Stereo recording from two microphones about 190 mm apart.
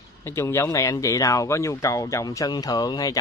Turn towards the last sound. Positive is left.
turn(degrees=20)  # may be behind; listen again after turning